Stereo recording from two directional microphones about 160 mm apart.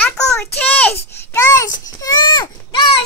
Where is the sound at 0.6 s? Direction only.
10° left (ahead or behind).